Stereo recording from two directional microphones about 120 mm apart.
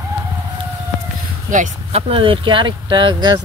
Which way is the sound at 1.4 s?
90° right.